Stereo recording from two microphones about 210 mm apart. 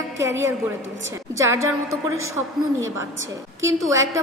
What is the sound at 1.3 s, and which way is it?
Speech, 15° right (ahead or behind).